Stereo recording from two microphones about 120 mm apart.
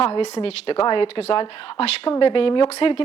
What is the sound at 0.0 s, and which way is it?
A woman's voice, 60° left (ahead or behind).